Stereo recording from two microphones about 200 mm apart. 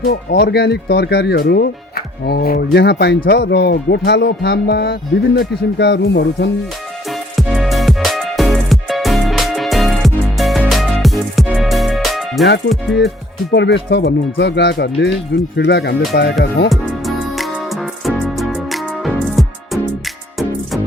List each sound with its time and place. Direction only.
0.0 s speech: 50° left (ahead or behind)
7.1 s music: centre (ahead or behind)
12.7 s speech: centre (ahead or behind)
13.5 s speech: 60° left (ahead or behind)
16.6 s music: centre (ahead or behind)